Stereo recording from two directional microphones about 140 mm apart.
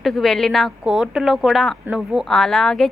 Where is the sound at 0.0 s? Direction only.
Centre (ahead or behind).